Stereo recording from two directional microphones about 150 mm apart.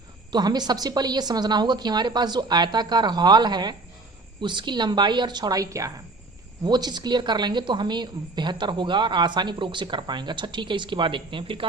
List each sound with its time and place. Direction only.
0.3 s a woman's voice: 25° right (ahead or behind)